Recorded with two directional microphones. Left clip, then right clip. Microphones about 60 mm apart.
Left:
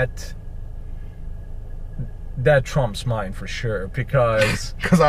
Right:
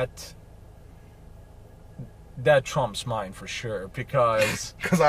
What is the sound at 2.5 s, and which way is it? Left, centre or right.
A man's voice, left.